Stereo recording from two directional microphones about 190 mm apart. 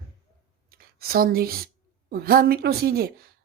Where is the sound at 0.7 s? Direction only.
50° right (ahead or behind).